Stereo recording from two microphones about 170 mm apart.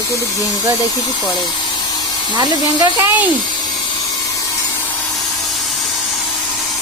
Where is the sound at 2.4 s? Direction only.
20° right (ahead or behind).